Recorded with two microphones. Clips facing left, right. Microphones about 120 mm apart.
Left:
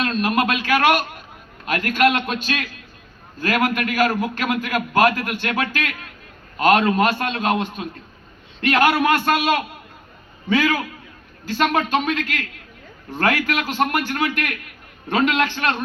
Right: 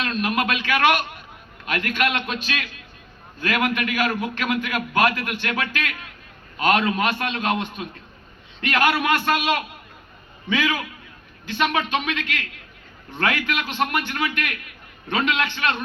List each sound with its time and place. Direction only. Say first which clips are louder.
0.0 s a man's voice: left 3 dB; 40° left (ahead or behind)